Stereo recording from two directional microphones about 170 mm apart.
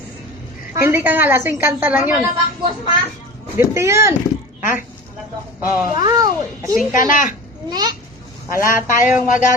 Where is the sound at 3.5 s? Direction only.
15° right (ahead or behind).